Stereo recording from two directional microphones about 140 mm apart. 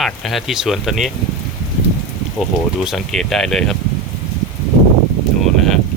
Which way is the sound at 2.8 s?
Centre (ahead or behind).